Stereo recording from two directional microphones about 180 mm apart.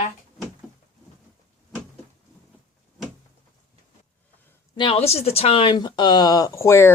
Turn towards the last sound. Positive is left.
turn(degrees=15)  # may be behind; listen again after turning